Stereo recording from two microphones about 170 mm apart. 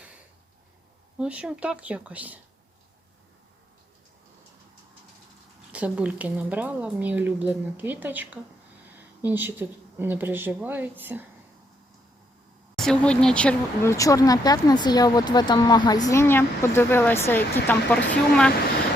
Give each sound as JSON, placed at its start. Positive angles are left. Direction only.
{"t": 1.2, "sound": "speech", "side_deg": -5}
{"t": 5.7, "sound": "speech", "side_deg": -10}
{"t": 12.7, "sound": "speech", "side_deg": 5}
{"t": 13.9, "sound": "speech", "side_deg": 20}